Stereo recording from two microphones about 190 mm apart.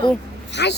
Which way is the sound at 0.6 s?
65° left (ahead or behind).